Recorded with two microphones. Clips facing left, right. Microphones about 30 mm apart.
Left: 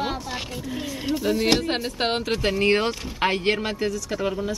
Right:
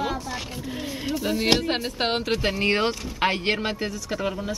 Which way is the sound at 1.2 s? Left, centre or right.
Centre.